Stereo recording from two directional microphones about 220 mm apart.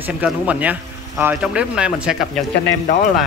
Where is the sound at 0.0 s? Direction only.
5° right (ahead or behind).